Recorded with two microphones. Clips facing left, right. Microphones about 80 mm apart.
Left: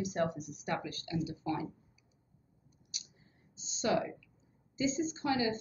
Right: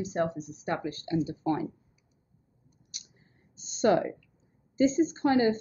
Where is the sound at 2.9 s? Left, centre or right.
Right.